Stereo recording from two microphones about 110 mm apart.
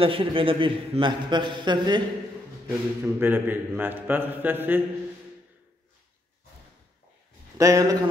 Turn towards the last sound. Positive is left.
turn(degrees=-35)  # may be behind; listen again after turning